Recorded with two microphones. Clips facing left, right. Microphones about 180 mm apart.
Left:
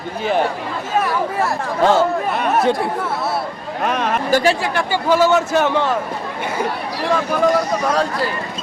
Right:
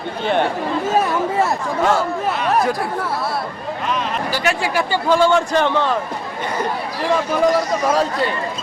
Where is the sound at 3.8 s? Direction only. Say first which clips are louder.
Left 4 dB; 60° left (ahead or behind).